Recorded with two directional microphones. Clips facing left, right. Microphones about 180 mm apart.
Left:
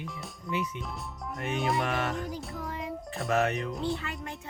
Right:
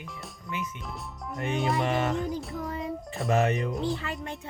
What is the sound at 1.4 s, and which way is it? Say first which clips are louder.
Speech: right 2 dB; centre (ahead or behind).